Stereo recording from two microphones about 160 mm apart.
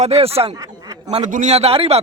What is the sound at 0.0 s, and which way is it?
Speech, 40° right (ahead or behind).